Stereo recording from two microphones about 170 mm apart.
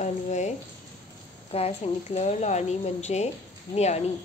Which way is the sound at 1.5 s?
35° left (ahead or behind).